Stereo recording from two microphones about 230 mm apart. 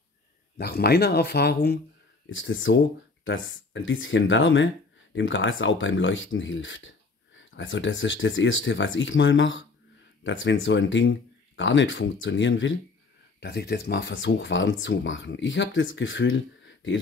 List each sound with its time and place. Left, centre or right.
0.6 s speech: left
2.2 s speech: left